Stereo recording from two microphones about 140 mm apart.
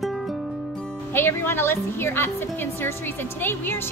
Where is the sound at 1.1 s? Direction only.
15° left (ahead or behind).